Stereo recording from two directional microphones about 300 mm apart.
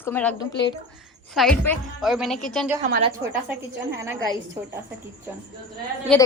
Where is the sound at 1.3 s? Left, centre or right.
Centre.